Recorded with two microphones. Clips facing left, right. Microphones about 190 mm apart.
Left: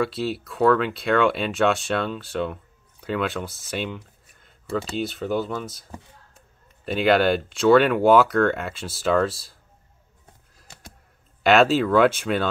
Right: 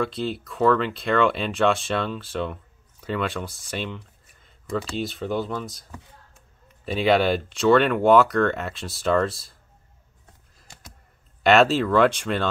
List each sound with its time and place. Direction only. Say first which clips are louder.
0.0 s speech: left 1 dB; 5° left (ahead or behind)
11.4 s speech: even; centre (ahead or behind)